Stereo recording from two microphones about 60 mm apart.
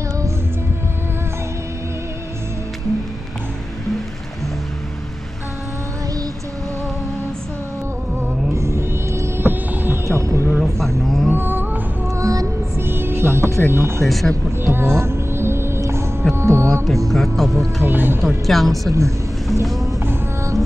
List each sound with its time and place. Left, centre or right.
8.5 s music: right
10.6 s a sound: centre
11.3 s music: right
12.2 s music: right
12.7 s music: right
13.7 s speech: right
14.0 s speech: centre
14.6 s music: right
17.1 s speech: centre
17.8 s speech: right
18.5 s speech: centre
18.9 s speech: right
19.6 s speech: centre